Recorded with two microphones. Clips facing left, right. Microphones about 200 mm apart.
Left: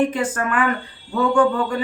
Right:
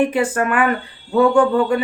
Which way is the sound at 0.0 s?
10° right (ahead or behind).